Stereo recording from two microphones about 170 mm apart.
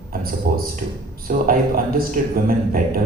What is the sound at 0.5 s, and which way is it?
A man's voice, 60° right (ahead or behind).